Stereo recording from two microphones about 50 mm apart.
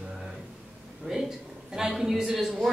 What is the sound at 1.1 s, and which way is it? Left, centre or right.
Speech, right.